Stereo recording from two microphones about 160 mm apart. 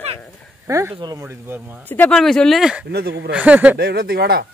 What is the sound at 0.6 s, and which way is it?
Speech, 20° right (ahead or behind).